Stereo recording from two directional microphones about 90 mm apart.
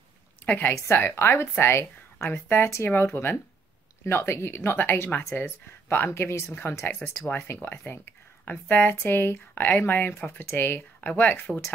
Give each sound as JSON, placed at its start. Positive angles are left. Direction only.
{"t": 0.5, "sound": "speech", "side_deg": 20}